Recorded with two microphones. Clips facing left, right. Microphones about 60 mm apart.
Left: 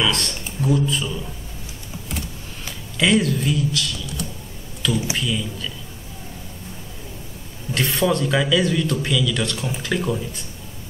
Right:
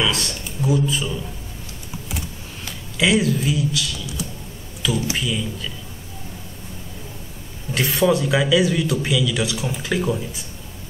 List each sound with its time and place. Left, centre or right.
0.0 s a man's voice: centre
2.0 s a sound: centre
5.1 s a man's voice: centre
7.7 s a man's voice: centre